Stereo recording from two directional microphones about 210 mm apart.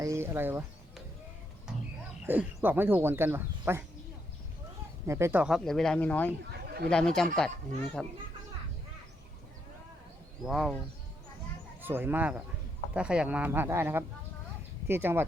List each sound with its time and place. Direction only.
0.0 s speech: 15° right (ahead or behind)
2.2 s speech: 10° right (ahead or behind)
5.0 s speech: 15° right (ahead or behind); by 6.3 s 5° left (ahead or behind)
6.4 s a sound: 50° right (ahead or behind)
6.9 s speech: 5° left (ahead or behind)
10.4 s speech: centre (ahead or behind)
11.8 s speech: 10° right (ahead or behind)